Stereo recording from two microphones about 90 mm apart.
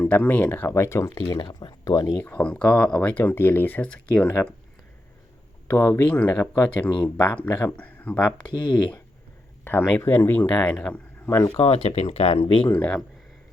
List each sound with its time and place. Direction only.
0.0 s speech: 20° left (ahead or behind)
1.3 s speech: 60° left (ahead or behind)
1.8 s speech: 45° left (ahead or behind)
2.2 s speech: 15° left (ahead or behind)
3.2 s speech: 25° left (ahead or behind)
3.8 s speech: 10° left (ahead or behind)
5.6 s speech: 25° left (ahead or behind)
10.0 s speech: 25° left (ahead or behind)
11.3 s speech: 30° left (ahead or behind)
11.6 s speech: 90° left; by 12.7 s 65° left (ahead or behind)
12.7 s speech: 15° left (ahead or behind)